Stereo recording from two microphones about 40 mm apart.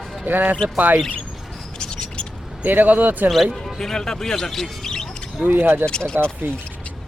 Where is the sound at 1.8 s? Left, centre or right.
Left.